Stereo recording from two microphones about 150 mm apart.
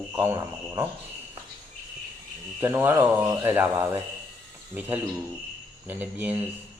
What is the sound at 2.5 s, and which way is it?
Speech, 15° right (ahead or behind).